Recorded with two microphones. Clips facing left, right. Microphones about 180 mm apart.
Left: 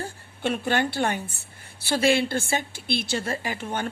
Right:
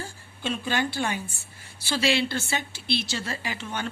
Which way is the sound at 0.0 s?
60° left (ahead or behind).